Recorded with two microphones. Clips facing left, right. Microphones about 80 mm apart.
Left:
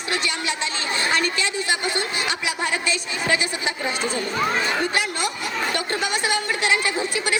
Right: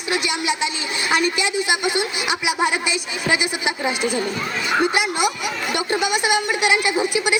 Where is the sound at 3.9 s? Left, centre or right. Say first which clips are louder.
Right 4 dB; centre.